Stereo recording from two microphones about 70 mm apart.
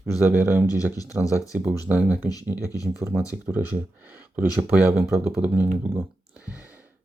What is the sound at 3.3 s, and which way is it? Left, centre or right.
Speech, right.